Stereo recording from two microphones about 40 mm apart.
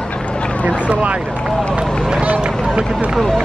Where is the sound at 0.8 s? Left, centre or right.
Right.